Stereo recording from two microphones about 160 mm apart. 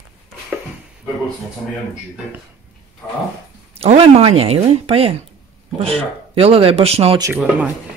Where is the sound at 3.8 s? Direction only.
40° right (ahead or behind).